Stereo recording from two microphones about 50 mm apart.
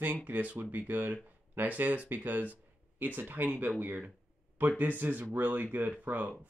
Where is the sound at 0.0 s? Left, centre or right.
Right.